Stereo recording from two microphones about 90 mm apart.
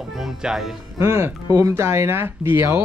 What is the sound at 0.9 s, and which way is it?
Speech, 30° right (ahead or behind).